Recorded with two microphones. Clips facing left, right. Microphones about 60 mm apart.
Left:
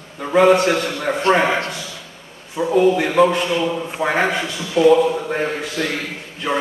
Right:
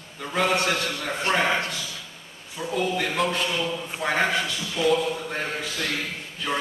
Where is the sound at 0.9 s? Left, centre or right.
Left.